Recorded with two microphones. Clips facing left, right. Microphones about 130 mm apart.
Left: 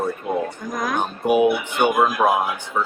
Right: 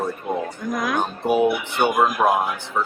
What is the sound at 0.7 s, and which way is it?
Speech, 45° left (ahead or behind).